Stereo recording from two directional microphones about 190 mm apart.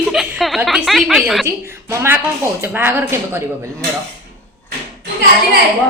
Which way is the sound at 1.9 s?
15° right (ahead or behind).